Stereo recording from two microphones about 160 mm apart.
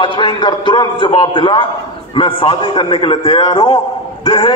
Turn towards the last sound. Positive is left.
turn(degrees=30)  # may be behind; listen again after turning